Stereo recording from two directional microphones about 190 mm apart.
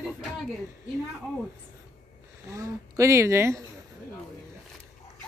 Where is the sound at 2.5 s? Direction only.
15° right (ahead or behind).